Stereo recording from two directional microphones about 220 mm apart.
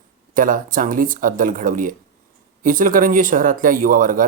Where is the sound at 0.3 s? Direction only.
40° right (ahead or behind).